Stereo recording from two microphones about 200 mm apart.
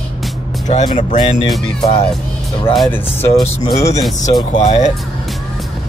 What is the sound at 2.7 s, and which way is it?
Speech, centre (ahead or behind).